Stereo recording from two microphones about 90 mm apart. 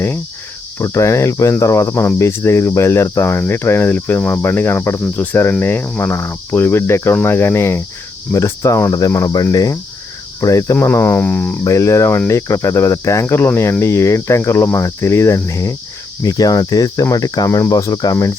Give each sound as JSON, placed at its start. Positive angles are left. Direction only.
{"t": 0.8, "sound": "cricket", "side_deg": 35}
{"t": 10.8, "sound": "cricket", "side_deg": 25}
{"t": 11.6, "sound": "cricket", "side_deg": 35}